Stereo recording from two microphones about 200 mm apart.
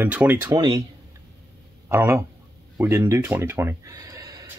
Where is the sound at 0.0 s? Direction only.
10° right (ahead or behind).